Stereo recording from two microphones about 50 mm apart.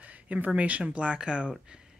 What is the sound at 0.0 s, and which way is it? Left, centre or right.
Speech, right.